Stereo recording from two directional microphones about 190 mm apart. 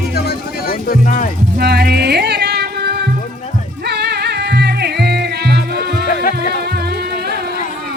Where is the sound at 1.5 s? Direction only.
55° right (ahead or behind).